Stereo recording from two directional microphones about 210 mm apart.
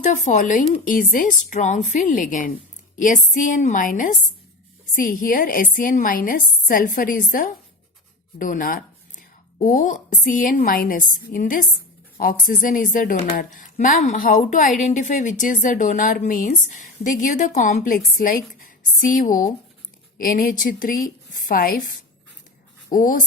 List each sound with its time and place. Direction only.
0.0 s a woman's voice: 35° left (ahead or behind)
22.9 s speech: 40° left (ahead or behind)